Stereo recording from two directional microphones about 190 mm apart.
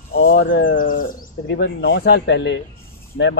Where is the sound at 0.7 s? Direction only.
45° left (ahead or behind).